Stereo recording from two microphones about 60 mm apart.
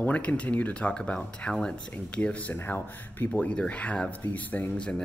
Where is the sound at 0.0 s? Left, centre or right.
Left.